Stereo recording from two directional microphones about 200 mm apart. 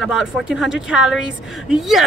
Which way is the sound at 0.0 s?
5° right (ahead or behind).